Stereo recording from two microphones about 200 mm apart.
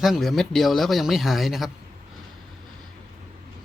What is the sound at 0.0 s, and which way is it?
Speech, centre (ahead or behind).